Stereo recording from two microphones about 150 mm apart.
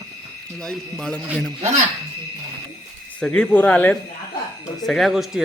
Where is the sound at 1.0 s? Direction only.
5° left (ahead or behind).